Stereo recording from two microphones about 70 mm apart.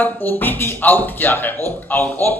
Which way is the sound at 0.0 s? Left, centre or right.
Left.